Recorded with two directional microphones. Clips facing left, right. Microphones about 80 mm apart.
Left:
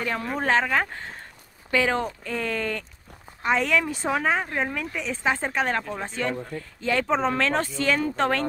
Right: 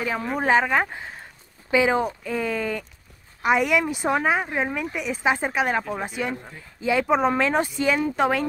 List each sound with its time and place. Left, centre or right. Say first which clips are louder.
0.0 s speech: right 2 dB; centre